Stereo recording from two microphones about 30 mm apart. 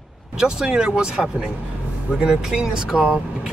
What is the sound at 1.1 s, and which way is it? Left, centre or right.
Speech, centre.